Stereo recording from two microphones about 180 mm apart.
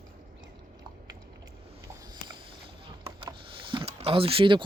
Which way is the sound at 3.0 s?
25° right (ahead or behind).